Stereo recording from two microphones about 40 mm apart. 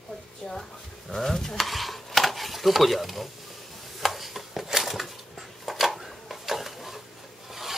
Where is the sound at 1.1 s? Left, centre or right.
Centre.